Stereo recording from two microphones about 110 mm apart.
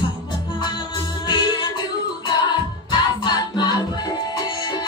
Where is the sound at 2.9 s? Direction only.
45° left (ahead or behind).